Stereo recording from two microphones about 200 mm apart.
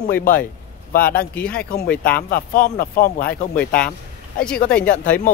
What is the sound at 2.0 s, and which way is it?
Speech, 50° left (ahead or behind).